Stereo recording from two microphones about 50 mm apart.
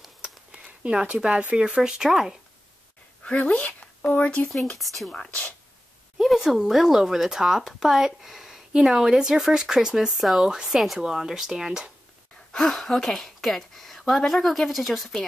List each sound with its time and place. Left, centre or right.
0.5 s a sound: right
1.6 s speech: centre
3.3 s speech: left
4.7 s speech: centre
5.1 s speech: left
6.2 s speech: centre
12.5 s speech: centre